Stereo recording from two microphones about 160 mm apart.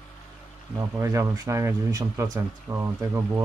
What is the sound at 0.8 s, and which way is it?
Speech, 20° right (ahead or behind).